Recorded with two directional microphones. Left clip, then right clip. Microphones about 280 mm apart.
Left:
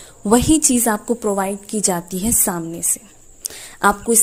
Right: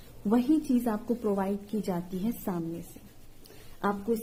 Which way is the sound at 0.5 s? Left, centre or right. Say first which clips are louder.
Left 11 dB; left.